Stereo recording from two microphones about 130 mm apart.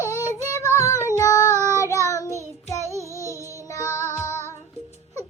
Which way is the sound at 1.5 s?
20° right (ahead or behind).